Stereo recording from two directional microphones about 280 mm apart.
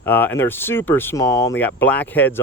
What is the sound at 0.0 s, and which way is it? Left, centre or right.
Speech, centre.